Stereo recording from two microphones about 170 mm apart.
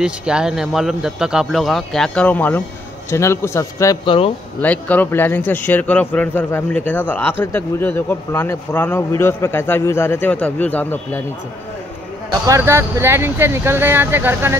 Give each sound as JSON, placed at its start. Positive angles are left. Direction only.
{"t": 0.0, "sound": "speech", "side_deg": -5}
{"t": 4.6, "sound": "speech", "side_deg": 10}
{"t": 12.4, "sound": "speech", "side_deg": -15}